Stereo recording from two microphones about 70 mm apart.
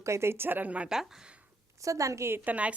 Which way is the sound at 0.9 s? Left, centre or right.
Centre.